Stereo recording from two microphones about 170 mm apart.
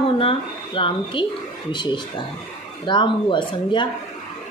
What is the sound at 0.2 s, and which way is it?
A woman's voice, 30° left (ahead or behind).